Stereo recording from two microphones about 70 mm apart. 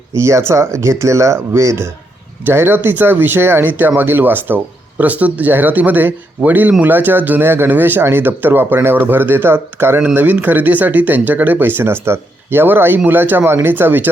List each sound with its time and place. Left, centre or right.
0.2 s speech: right